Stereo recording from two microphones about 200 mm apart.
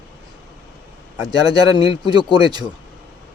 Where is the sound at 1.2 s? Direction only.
20° right (ahead or behind).